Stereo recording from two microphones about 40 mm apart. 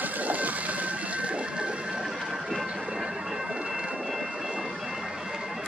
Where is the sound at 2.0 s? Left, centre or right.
Centre.